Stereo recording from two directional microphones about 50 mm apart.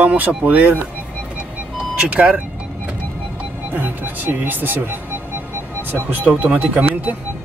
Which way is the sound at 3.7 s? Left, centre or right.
Right.